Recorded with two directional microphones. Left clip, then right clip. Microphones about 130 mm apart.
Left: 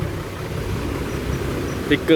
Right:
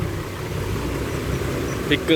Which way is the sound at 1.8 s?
45° left (ahead or behind).